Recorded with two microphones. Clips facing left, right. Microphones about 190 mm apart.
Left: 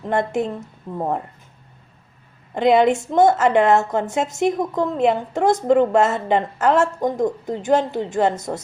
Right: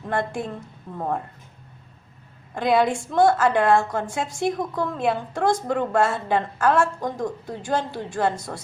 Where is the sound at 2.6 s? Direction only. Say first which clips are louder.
Left 5 dB; 20° left (ahead or behind).